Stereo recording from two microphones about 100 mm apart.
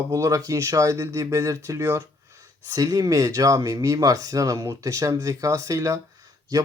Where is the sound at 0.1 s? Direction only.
35° right (ahead or behind).